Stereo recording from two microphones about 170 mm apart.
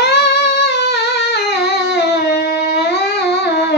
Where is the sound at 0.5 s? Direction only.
75° left (ahead or behind).